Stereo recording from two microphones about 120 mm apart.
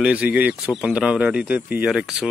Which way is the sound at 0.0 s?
10° right (ahead or behind).